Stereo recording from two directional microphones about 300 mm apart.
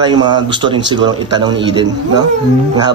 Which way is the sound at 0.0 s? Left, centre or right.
Centre.